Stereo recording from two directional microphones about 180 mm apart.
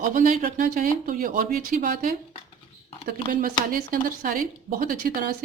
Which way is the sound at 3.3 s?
50° right (ahead or behind).